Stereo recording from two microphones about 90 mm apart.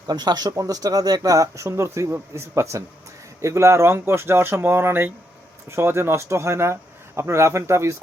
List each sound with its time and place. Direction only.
0.1 s speech: 50° right (ahead or behind); by 7.9 s 30° right (ahead or behind)